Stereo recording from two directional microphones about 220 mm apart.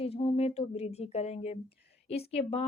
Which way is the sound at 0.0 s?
25° left (ahead or behind).